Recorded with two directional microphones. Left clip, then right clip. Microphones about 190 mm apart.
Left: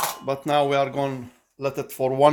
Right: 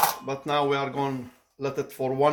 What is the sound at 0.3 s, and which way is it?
Speech, 50° left (ahead or behind).